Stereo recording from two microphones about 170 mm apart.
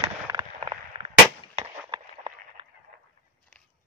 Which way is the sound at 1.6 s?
25° right (ahead or behind).